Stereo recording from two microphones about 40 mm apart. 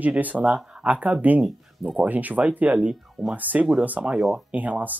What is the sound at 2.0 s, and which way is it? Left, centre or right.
Speech, right.